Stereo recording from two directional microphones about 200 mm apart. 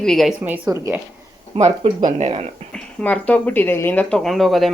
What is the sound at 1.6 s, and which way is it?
Speech, 35° right (ahead or behind).